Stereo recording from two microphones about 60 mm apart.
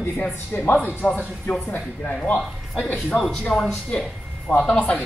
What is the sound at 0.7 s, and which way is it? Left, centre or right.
Speech, left.